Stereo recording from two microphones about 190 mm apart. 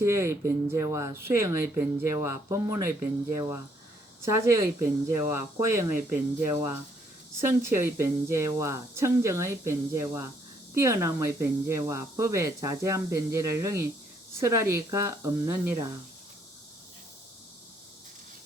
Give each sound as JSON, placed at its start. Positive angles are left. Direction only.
{"t": 0.0, "sound": "speech", "side_deg": -15}